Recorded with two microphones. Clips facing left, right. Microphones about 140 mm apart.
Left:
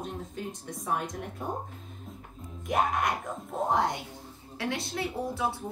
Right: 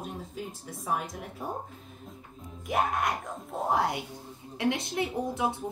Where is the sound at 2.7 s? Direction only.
Centre (ahead or behind).